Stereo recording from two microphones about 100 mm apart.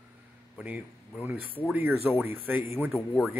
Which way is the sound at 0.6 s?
15° right (ahead or behind).